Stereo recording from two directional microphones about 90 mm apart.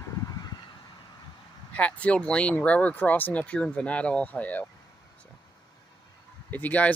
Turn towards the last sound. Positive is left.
turn(degrees=15)  # may be behind; listen again after turning